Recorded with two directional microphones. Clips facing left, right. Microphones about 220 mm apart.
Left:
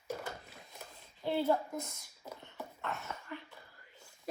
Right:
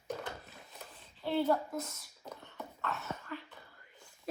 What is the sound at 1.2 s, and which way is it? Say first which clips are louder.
Speech: right 1 dB; 20° left (ahead or behind).